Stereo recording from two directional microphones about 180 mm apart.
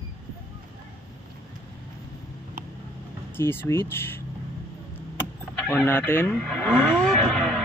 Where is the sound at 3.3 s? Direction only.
10° left (ahead or behind).